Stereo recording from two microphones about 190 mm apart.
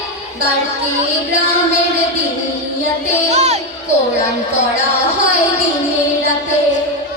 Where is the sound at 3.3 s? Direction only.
35° right (ahead or behind).